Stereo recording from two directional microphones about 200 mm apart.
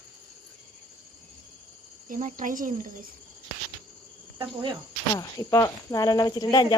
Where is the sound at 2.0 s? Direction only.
40° right (ahead or behind).